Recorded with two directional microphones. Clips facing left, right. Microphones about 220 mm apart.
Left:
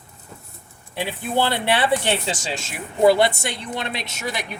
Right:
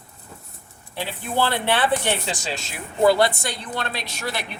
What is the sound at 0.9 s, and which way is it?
Speech, 15° left (ahead or behind).